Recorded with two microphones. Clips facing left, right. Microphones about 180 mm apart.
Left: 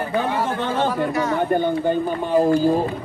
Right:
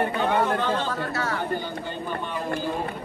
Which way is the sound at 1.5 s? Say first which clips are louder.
Left 11 dB; 55° left (ahead or behind).